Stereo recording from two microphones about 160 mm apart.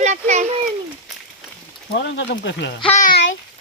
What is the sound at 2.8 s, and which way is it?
Speech, 50° left (ahead or behind).